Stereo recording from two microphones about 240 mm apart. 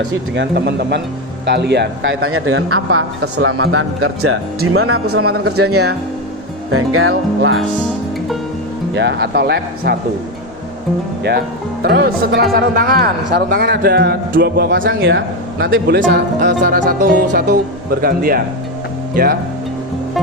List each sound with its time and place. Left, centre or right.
0.3 s a man's voice: right
5.2 s a man's voice: right
6.7 s a man's voice: right
7.1 s speech: right
9.0 s speech: right
11.2 s a man's voice: right